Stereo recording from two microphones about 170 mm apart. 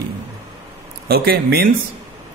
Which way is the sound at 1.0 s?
65° right (ahead or behind).